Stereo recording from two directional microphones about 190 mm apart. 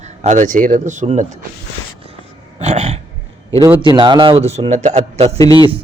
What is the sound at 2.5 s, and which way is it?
Dog, 35° right (ahead or behind).